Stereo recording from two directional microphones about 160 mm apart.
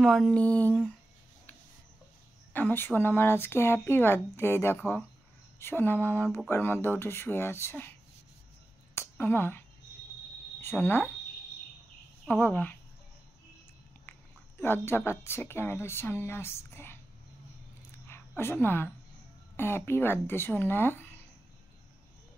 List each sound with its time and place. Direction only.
0.0 s speech: 5° left (ahead or behind)
2.5 s speech: 10° left (ahead or behind)
9.1 s speech: 15° left (ahead or behind)
12.3 s speech: 10° left (ahead or behind)
14.6 s speech: 15° left (ahead or behind)
18.0 s a sound: 15° left (ahead or behind)
19.5 s speech: 15° left (ahead or behind)